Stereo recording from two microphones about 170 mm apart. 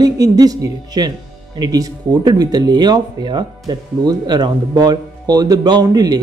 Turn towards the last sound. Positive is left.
turn(degrees=-25)  # may be behind; listen again after turning